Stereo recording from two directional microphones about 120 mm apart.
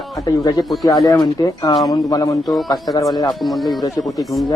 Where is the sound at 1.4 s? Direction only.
35° left (ahead or behind).